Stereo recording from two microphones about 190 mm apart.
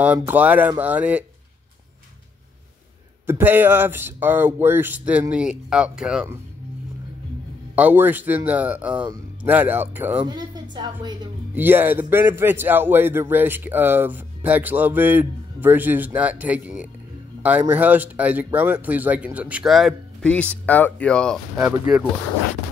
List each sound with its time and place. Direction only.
0.0 s a man's voice: 10° right (ahead or behind)
3.3 s a man's voice: 10° right (ahead or behind)
7.7 s a man's voice: 10° right (ahead or behind)
10.2 s a woman's voice: 20° right (ahead or behind)
11.5 s a man's voice: 10° right (ahead or behind)